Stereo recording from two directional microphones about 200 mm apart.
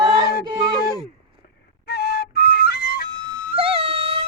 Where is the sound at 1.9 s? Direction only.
50° left (ahead or behind).